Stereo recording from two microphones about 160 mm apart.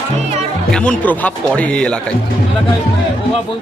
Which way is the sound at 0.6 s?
5° left (ahead or behind).